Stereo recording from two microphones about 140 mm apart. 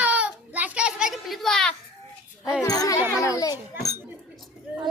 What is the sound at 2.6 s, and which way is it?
Speech, 25° left (ahead or behind).